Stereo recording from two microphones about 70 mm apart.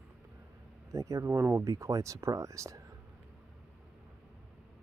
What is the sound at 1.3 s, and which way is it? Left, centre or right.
Speech, right.